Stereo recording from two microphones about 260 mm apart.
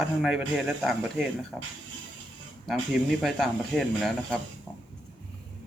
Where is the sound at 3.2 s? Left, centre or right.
Centre.